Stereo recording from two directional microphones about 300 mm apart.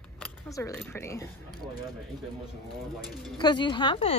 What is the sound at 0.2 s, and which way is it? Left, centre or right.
Speech, centre.